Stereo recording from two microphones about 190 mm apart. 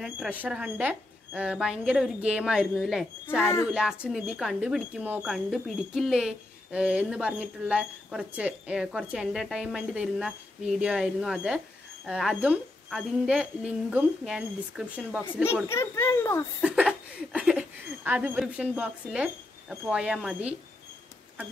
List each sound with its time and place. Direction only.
0.0 s speech: 5° right (ahead or behind)
3.3 s a child's voice: 10° left (ahead or behind)
3.7 s speech: 5° right (ahead or behind)
15.7 s a child's voice: 15° left (ahead or behind)
16.6 s speech: 5° right (ahead or behind)